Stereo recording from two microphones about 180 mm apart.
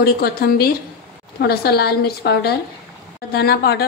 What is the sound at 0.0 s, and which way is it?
Speech, 60° left (ahead or behind).